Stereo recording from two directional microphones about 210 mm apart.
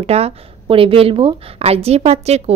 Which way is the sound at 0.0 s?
30° right (ahead or behind).